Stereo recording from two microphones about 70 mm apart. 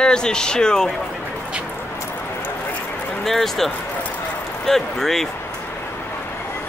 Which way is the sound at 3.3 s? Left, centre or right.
Centre.